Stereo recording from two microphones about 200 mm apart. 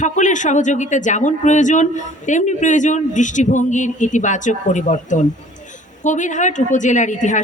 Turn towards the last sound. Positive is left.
turn(degrees=40)  # may be behind; listen again after turning